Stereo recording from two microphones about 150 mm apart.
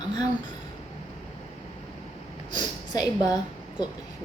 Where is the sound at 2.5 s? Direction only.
25° left (ahead or behind).